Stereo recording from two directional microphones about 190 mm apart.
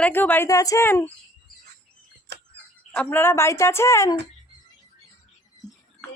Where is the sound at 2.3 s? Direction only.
65° right (ahead or behind).